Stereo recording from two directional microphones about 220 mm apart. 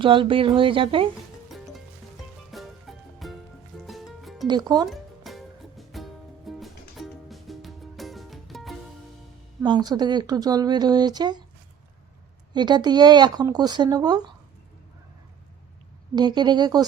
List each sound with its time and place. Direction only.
0.0 s speech: 25° right (ahead or behind)
1.5 s music: centre (ahead or behind)
4.4 s speech: 20° right (ahead or behind)
4.9 s music: centre (ahead or behind)
9.6 s speech: 20° right (ahead or behind)
12.5 s speech: 20° right (ahead or behind)
16.1 s speech: 20° right (ahead or behind)